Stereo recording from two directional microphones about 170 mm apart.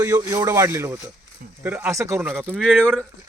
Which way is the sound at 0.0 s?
15° right (ahead or behind).